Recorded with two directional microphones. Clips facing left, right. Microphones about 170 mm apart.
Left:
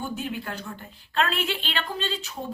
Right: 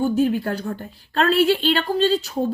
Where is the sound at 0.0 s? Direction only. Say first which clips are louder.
Right 12 dB; 40° right (ahead or behind).